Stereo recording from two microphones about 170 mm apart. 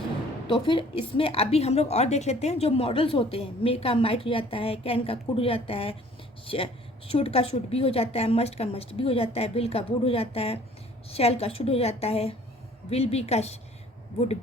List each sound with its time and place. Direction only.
0.4 s a woman's voice: 30° left (ahead or behind)